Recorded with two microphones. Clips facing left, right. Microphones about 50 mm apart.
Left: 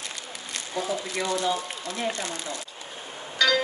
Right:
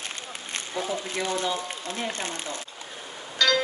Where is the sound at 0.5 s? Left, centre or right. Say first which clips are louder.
Left 1 dB; right.